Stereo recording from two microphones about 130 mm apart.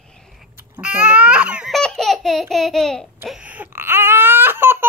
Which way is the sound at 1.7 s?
5° left (ahead or behind).